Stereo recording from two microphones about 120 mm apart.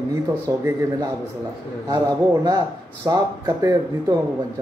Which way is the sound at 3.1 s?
35° right (ahead or behind).